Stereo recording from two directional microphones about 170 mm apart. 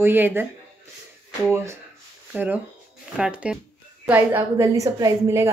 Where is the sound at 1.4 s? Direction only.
15° right (ahead or behind).